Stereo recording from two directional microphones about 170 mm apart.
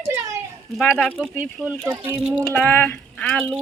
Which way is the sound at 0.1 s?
15° right (ahead or behind).